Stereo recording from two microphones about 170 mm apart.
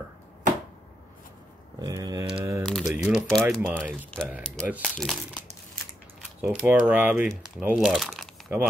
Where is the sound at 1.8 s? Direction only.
25° right (ahead or behind).